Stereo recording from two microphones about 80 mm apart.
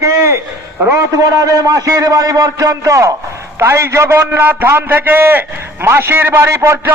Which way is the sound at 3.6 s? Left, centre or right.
Right.